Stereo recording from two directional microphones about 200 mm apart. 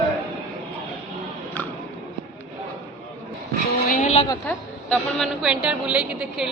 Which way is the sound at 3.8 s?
40° left (ahead or behind).